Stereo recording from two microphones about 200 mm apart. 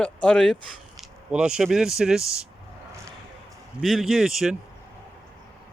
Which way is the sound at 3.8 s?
Centre (ahead or behind).